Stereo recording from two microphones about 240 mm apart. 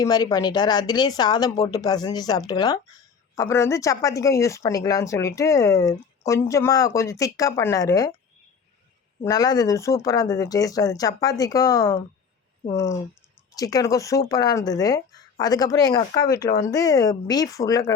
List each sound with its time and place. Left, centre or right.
0.0 s speech: centre
9.2 s speech: centre